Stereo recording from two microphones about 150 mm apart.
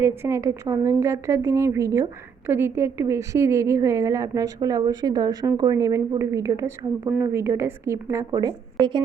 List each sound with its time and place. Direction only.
0.0 s a woman's voice: 15° right (ahead or behind)